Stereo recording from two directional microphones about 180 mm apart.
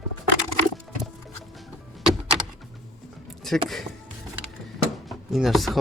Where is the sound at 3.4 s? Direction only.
Centre (ahead or behind).